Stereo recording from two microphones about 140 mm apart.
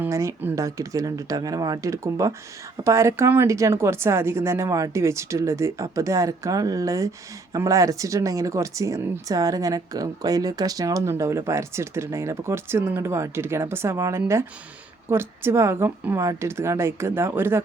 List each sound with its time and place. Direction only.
0.0 s a woman's voice: 20° right (ahead or behind)